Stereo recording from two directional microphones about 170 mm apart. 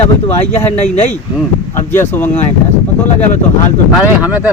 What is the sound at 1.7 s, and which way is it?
Speech, 15° left (ahead or behind).